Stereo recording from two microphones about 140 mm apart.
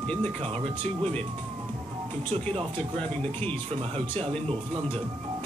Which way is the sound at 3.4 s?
45° right (ahead or behind).